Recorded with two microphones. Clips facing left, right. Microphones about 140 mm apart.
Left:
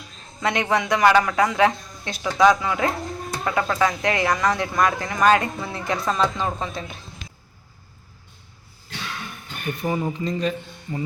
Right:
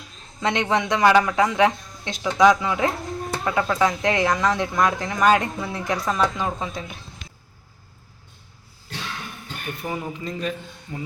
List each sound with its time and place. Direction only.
0.4 s speech: 20° right (ahead or behind)
9.8 s speech: centre (ahead or behind)